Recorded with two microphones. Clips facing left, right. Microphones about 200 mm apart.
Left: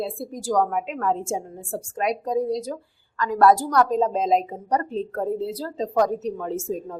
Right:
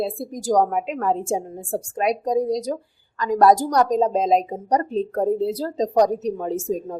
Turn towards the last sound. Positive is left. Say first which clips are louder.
# right 3 dB
turn(degrees=-15)  # may be behind; listen again after turning